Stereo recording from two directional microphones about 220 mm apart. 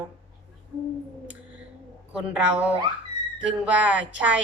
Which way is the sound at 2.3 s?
5° right (ahead or behind).